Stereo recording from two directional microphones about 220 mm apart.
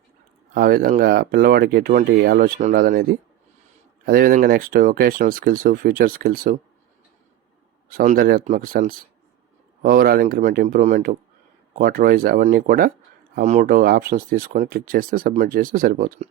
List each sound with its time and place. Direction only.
0.5 s speech: 45° right (ahead or behind)
7.9 s speech: 40° right (ahead or behind)